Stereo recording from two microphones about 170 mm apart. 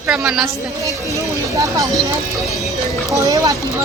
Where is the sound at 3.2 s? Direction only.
20° right (ahead or behind).